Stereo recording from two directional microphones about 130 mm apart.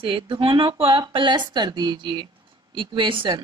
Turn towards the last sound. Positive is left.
turn(degrees=-40)  # may be behind; listen again after turning